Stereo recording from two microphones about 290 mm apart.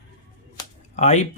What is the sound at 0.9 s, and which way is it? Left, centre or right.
Speech, left.